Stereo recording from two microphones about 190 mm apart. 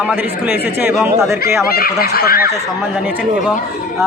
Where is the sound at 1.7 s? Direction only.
55° left (ahead or behind).